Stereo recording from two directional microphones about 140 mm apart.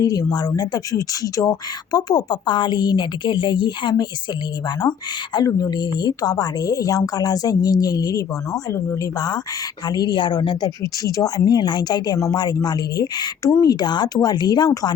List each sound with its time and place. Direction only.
0.0 s speech: 25° left (ahead or behind)